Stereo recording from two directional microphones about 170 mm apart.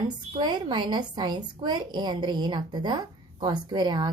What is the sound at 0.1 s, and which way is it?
A woman's voice, 25° right (ahead or behind).